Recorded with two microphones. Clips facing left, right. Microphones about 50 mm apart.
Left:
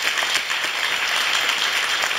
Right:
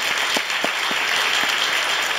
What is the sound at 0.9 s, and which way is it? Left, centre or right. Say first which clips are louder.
Applause: right 1 dB; centre.